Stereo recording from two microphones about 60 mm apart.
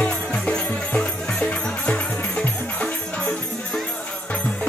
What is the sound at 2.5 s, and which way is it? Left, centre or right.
Music, left.